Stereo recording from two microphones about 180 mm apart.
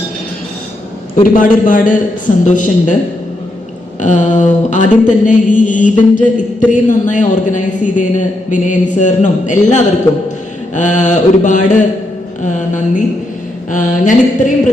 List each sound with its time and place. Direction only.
1.2 s a woman's voice: 50° left (ahead or behind)
4.0 s a woman's voice: 45° left (ahead or behind)